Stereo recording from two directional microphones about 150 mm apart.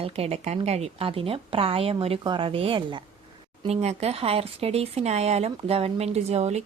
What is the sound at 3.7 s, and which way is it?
Speech, 45° right (ahead or behind).